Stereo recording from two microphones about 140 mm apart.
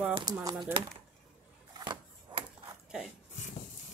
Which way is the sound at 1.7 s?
30° right (ahead or behind).